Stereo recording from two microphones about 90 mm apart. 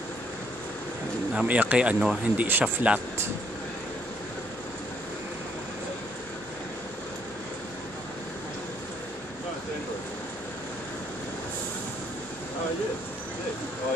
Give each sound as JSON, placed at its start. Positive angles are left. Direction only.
{"t": 1.3, "sound": "speech", "side_deg": -10}